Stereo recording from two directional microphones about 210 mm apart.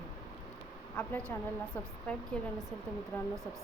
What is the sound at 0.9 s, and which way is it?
A woman's voice, 10° left (ahead or behind).